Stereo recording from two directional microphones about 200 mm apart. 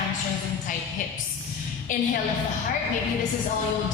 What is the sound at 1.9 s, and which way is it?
Speech, 40° left (ahead or behind).